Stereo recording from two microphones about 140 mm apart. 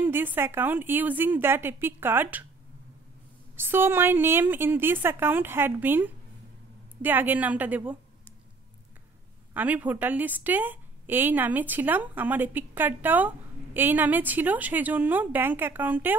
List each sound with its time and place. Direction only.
0.0 s a woman's voice: 15° right (ahead or behind)
3.5 s a woman's voice: 15° right (ahead or behind)
9.5 s a woman's voice: 10° right (ahead or behind)